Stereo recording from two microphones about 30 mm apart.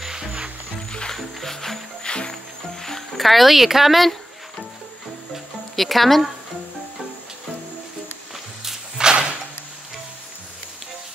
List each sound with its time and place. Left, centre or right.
1.1 s music: centre
2.0 s music: left
3.2 s speech: centre
4.0 s music: centre
5.8 s speech: centre
9.0 s a sound: right